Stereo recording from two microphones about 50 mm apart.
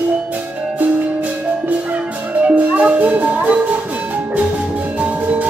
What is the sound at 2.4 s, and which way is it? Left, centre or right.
Music, right.